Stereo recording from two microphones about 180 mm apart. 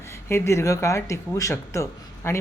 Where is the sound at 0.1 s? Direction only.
15° left (ahead or behind).